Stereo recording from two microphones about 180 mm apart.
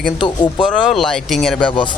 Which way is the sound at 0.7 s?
Centre (ahead or behind).